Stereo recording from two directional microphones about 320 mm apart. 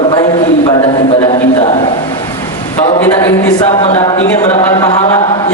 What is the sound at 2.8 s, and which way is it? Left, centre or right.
A man's voice, centre.